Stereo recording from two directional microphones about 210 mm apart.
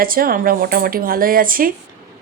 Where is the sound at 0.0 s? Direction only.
45° right (ahead or behind).